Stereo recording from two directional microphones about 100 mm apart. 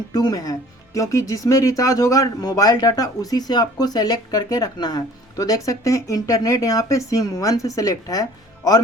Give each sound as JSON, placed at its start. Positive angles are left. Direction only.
{"t": 0.1, "sound": "speech", "side_deg": 40}